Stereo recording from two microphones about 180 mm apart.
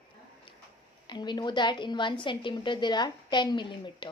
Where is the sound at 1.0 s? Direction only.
25° left (ahead or behind).